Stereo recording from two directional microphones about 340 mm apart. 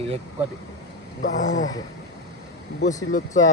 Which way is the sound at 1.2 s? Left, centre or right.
Left.